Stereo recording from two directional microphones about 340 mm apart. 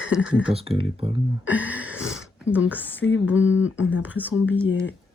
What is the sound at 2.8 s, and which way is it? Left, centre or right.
Speech, centre.